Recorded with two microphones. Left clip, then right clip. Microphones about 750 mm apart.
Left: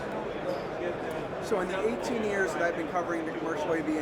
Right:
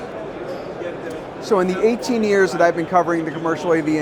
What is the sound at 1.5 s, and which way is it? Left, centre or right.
Speech, right.